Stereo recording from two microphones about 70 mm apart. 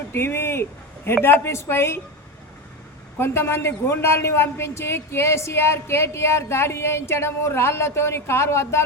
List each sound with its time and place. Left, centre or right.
0.1 s a man's voice: left
3.2 s a man's voice: left